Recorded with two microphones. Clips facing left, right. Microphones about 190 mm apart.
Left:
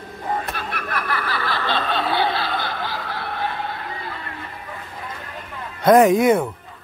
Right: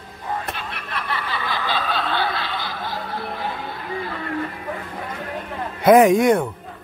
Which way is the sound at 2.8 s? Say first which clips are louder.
Right 1 dB; 90° left.